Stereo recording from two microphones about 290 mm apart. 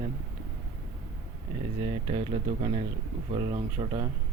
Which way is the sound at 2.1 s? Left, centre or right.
Right.